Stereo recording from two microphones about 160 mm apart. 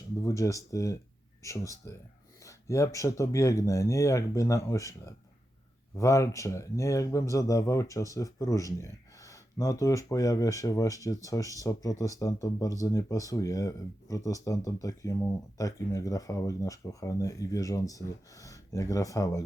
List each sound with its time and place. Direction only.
0.2 s speech: 20° left (ahead or behind)